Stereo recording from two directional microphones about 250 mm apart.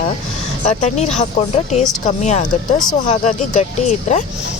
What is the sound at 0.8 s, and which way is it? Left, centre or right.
Speech, left.